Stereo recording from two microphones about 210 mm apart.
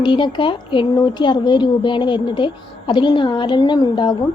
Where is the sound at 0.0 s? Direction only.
20° left (ahead or behind).